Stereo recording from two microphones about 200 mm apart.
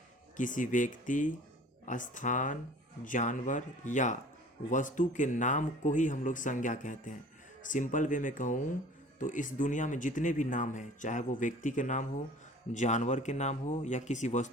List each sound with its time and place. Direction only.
0.3 s speech: 40° left (ahead or behind)